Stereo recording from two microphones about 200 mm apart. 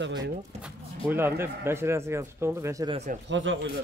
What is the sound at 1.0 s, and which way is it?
Speech, 10° right (ahead or behind).